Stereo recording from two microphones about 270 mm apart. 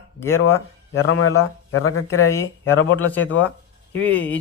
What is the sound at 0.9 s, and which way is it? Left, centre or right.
Speech, left.